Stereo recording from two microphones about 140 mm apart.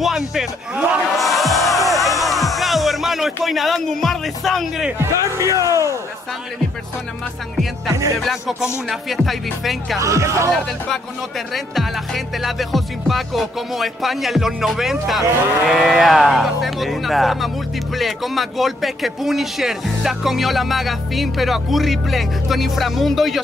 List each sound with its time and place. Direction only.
0.0 s speech: centre (ahead or behind)
1.9 s music: centre (ahead or behind)
4.9 s a man's voice: 20° right (ahead or behind)
8.2 s music: centre (ahead or behind)
9.9 s a man's voice: 20° right (ahead or behind)
11.5 s music: centre (ahead or behind)